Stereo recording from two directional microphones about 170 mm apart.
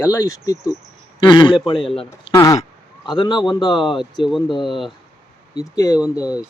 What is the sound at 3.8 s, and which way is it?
Speech, centre (ahead or behind).